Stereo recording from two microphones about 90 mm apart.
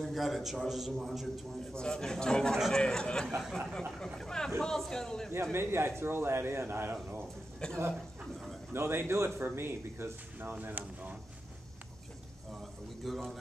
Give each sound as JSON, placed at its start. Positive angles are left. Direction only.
{"t": 0.0, "sound": "a man's voice", "side_deg": 0}
{"t": 3.3, "sound": "a man's voice", "side_deg": -5}
{"t": 4.0, "sound": "a man's voice", "side_deg": 5}
{"t": 5.3, "sound": "a man's voice", "side_deg": -25}
{"t": 7.6, "sound": "a man's voice", "side_deg": 10}
{"t": 8.7, "sound": "a man's voice", "side_deg": -25}
{"t": 13.0, "sound": "a man's voice", "side_deg": 0}